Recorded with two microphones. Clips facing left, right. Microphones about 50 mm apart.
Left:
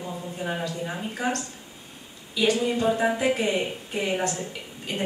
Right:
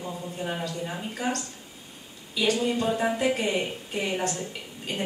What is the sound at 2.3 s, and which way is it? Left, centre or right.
A woman's voice, centre.